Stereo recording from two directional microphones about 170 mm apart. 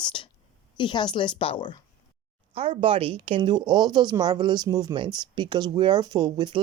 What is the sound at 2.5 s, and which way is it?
A woman's voice, 35° right (ahead or behind).